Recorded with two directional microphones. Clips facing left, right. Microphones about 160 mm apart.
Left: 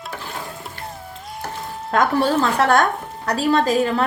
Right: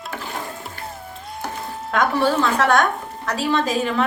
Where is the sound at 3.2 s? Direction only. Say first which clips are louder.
Left 3 dB; 40° left (ahead or behind).